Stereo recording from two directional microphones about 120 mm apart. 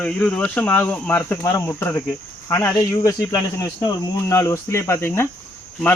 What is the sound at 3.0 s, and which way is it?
Speech, 30° left (ahead or behind).